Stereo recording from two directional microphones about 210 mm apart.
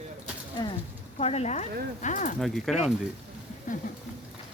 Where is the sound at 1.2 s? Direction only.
30° left (ahead or behind).